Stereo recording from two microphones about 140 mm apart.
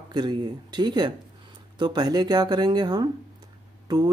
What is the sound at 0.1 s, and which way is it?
Speech, 30° right (ahead or behind).